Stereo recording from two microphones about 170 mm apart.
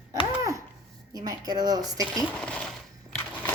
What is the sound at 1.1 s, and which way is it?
Speech, 25° right (ahead or behind).